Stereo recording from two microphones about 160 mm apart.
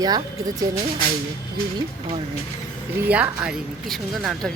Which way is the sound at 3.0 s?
10° right (ahead or behind).